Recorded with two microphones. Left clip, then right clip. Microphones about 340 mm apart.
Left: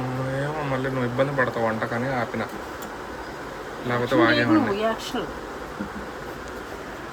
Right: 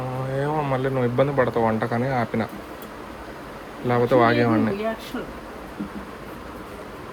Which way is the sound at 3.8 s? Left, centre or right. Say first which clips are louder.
Right 2 dB; centre.